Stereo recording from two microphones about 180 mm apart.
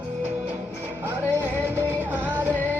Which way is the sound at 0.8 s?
10° right (ahead or behind).